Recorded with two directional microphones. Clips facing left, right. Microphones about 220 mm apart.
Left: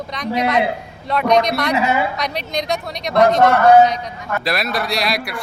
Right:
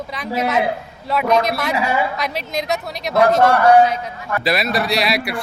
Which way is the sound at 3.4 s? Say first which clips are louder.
Left 2 dB; 25° left (ahead or behind).